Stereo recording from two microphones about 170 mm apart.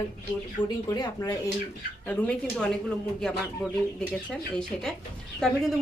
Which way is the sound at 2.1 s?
5° left (ahead or behind).